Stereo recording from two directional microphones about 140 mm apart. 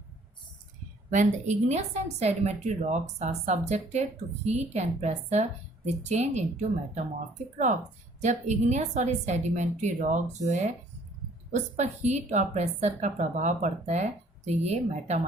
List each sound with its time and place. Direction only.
1.1 s a woman's voice: 60° right (ahead or behind)
8.2 s a woman's voice: 55° right (ahead or behind)